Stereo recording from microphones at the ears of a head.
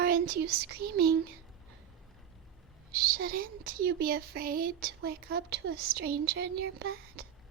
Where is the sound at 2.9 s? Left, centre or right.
Right.